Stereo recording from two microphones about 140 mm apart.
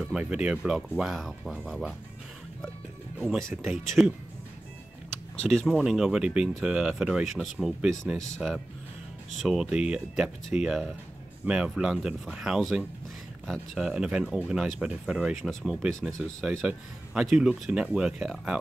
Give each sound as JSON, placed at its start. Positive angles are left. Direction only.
{"t": 0.1, "sound": "speech", "side_deg": -5}
{"t": 3.2, "sound": "speech", "side_deg": 0}
{"t": 5.4, "sound": "speech", "side_deg": 5}